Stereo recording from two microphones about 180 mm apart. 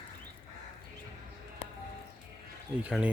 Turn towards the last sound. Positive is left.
turn(degrees=-5)  # may be behind; listen again after turning